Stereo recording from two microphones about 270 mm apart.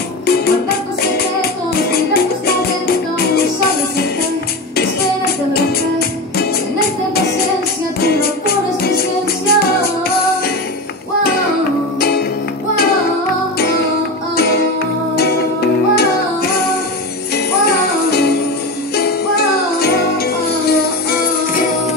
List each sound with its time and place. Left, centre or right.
0.3 s music: left
4.7 s music: left
8.0 s music: left
11.2 s music: left
13.6 s music: left
17.5 s jingle bell: left
18.9 s music: left